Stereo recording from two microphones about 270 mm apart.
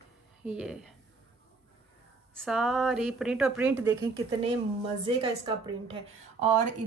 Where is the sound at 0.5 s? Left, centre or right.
Centre.